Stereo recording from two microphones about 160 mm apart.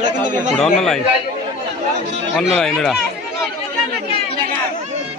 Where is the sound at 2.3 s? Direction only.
5° left (ahead or behind).